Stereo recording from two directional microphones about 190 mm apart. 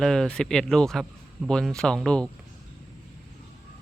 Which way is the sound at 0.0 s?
5° left (ahead or behind).